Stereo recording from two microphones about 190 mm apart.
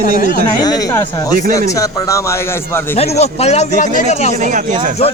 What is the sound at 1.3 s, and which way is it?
Speech, 50° right (ahead or behind).